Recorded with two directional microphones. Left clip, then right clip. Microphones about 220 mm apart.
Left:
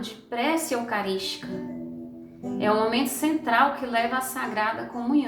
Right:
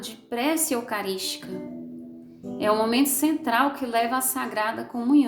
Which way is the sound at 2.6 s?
55° right (ahead or behind).